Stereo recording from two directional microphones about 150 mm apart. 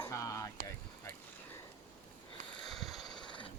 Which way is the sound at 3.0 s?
30° left (ahead or behind).